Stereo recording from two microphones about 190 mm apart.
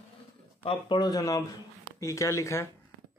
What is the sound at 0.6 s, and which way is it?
Speech, 25° left (ahead or behind).